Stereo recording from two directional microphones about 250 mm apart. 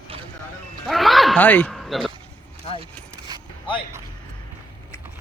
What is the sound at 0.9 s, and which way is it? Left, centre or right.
Speech, centre.